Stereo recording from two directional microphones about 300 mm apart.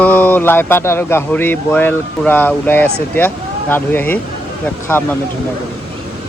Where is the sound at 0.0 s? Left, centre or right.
Centre.